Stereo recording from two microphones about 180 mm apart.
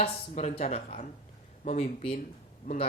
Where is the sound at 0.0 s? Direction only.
35° left (ahead or behind).